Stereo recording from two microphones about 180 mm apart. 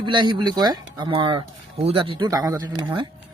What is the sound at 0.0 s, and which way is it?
Speech, 25° right (ahead or behind).